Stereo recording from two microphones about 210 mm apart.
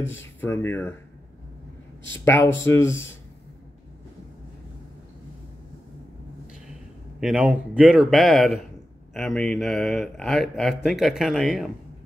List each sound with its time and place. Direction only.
0.4 s speech: 10° left (ahead or behind)
2.2 s speech: 10° left (ahead or behind)
7.2 s a man's voice: 5° right (ahead or behind)